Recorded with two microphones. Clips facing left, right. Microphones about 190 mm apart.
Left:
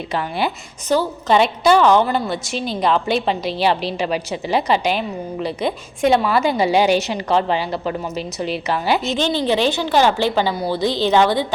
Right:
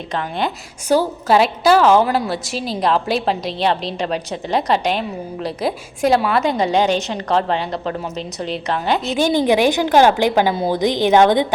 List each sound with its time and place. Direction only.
0.1 s a woman's voice: 5° left (ahead or behind)
0.9 s a woman's voice: 10° right (ahead or behind)
9.1 s a woman's voice: 10° right (ahead or behind)